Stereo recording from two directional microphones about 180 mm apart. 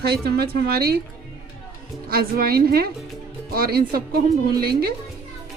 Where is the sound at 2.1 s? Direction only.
55° right (ahead or behind).